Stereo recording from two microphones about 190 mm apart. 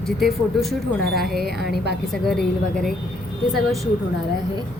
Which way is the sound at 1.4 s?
55° right (ahead or behind).